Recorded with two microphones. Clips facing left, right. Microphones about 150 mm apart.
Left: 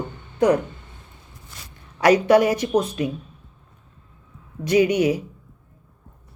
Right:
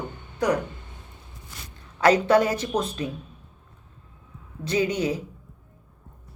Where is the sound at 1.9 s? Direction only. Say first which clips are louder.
Left 3 dB; 15° left (ahead or behind).